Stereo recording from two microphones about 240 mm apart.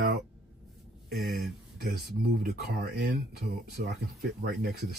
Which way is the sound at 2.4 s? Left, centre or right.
Right.